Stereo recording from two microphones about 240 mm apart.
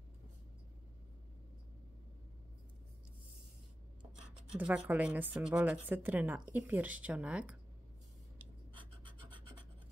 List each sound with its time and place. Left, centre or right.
4.6 s a woman's voice: centre
8.7 s scratch: right